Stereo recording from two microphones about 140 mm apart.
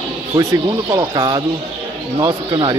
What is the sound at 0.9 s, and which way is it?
Speech, 30° right (ahead or behind).